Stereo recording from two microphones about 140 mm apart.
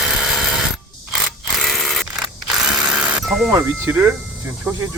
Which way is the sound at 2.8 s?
5° right (ahead or behind).